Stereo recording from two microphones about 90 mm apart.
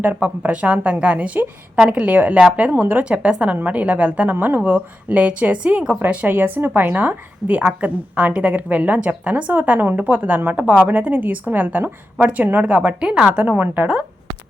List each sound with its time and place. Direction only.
0.0 s a woman's voice: 20° right (ahead or behind)